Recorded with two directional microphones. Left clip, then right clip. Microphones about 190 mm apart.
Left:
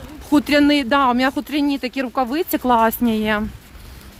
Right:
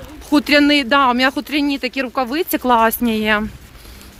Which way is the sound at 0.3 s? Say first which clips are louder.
Right 2 dB; 20° left (ahead or behind).